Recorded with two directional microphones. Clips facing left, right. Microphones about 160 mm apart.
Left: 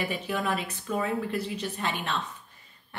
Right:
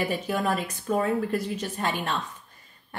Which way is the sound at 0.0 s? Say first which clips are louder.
Right 3 dB; 40° right (ahead or behind).